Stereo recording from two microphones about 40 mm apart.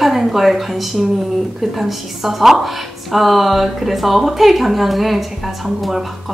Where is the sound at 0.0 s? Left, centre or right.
Centre.